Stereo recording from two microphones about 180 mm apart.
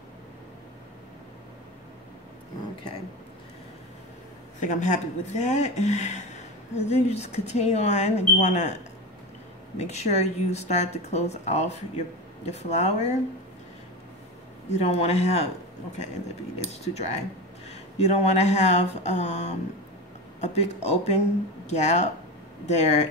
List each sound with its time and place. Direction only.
4.6 s speech: 45° left (ahead or behind)
9.8 s speech: 40° left (ahead or behind)
14.7 s speech: 35° left (ahead or behind)
16.5 s speech: 40° left (ahead or behind)